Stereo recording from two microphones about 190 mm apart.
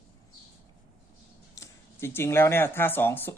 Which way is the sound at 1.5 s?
15° left (ahead or behind).